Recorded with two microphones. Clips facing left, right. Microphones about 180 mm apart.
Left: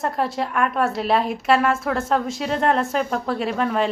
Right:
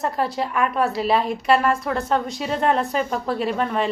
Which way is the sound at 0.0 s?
Centre (ahead or behind).